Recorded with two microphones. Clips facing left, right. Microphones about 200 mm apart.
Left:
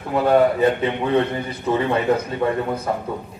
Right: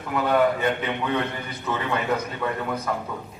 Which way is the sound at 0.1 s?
30° left (ahead or behind).